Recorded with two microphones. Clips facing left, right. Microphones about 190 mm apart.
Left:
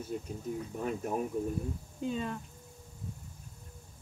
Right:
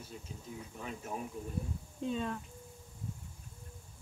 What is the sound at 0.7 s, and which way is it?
Speech, 50° left (ahead or behind).